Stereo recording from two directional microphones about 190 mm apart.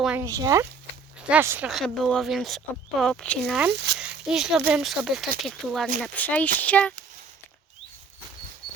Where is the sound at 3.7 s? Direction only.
60° right (ahead or behind).